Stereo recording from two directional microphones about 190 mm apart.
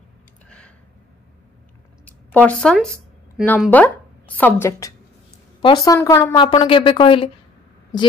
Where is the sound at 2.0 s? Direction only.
10° left (ahead or behind).